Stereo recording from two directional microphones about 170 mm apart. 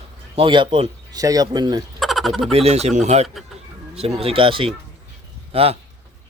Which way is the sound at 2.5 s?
35° right (ahead or behind).